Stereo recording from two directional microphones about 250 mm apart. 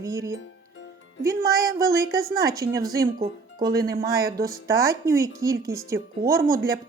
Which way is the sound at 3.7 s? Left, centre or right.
Right.